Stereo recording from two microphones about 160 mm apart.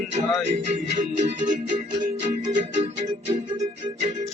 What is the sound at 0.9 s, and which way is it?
Music, 55° right (ahead or behind).